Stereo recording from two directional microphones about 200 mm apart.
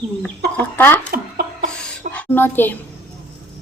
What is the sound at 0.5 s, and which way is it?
Chicken, 10° left (ahead or behind).